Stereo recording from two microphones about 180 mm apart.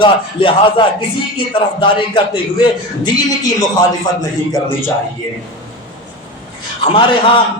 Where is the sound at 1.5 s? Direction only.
30° left (ahead or behind).